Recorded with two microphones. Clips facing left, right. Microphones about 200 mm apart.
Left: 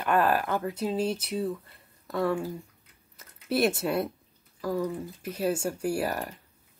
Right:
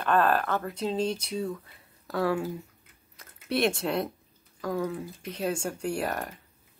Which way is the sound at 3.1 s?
5° left (ahead or behind).